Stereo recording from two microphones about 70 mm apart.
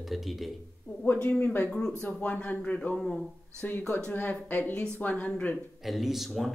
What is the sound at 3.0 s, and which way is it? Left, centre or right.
Speech, centre.